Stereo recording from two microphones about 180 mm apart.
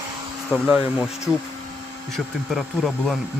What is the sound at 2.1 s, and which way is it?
Speech, centre (ahead or behind).